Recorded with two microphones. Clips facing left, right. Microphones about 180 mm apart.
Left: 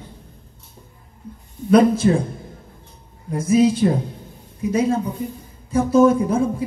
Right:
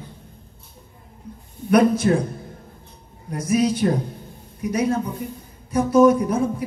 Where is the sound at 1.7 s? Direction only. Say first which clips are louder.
Left 2 dB; 25° left (ahead or behind).